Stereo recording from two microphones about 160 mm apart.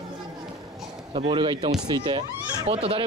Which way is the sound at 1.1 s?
30° right (ahead or behind).